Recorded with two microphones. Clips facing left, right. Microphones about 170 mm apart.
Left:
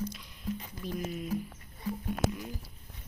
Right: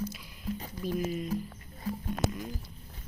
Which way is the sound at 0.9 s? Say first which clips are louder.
Right 4 dB; centre (ahead or behind).